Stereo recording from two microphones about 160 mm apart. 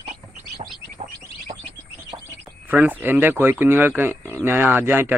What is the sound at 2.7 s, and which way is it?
Speech, 10° right (ahead or behind).